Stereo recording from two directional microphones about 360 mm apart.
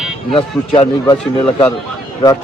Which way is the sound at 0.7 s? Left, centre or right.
Centre.